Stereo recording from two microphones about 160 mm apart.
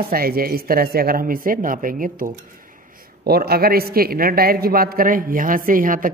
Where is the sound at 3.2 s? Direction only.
75° right (ahead or behind).